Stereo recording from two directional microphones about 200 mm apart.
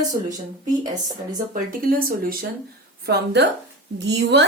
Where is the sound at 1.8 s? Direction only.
45° right (ahead or behind).